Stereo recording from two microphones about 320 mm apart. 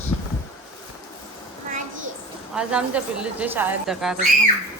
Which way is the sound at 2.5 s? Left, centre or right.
Centre.